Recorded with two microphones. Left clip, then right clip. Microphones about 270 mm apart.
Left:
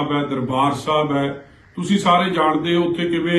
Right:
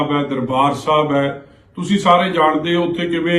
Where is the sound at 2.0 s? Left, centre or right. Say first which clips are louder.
Right 3 dB; centre.